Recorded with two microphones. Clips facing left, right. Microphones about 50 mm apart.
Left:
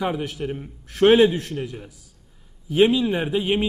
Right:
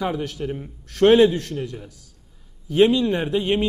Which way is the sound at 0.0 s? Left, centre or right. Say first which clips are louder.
Even; centre.